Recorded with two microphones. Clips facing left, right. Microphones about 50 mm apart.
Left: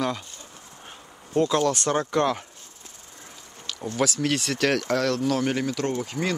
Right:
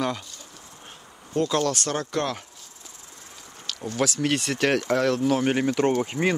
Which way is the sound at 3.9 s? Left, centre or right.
Centre.